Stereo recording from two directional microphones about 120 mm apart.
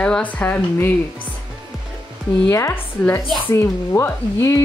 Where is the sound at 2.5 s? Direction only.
20° left (ahead or behind).